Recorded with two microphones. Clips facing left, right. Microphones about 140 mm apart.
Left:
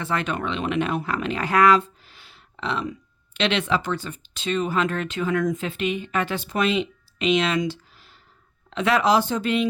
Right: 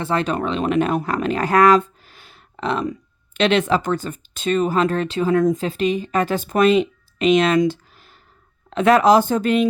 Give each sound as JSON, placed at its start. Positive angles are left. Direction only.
{"t": 0.0, "sound": "speech", "side_deg": -30}